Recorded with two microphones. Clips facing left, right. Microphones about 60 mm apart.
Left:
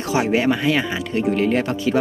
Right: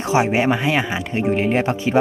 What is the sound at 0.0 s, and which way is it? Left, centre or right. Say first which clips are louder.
Speech: right 1 dB; right.